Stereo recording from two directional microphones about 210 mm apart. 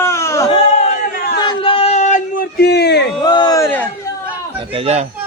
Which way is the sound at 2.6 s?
50° left (ahead or behind).